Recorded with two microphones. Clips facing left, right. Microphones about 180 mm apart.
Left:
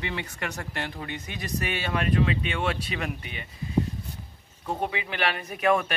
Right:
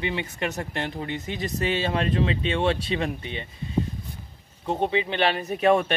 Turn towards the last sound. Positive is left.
turn(degrees=-30)  # may be behind; listen again after turning